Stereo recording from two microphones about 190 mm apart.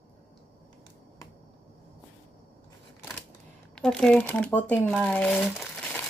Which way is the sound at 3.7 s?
5° left (ahead or behind).